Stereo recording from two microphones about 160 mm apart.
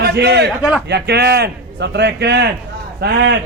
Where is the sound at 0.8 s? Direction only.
90° right.